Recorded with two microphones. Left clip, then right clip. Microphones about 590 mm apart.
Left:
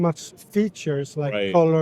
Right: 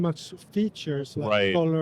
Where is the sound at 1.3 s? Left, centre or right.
Right.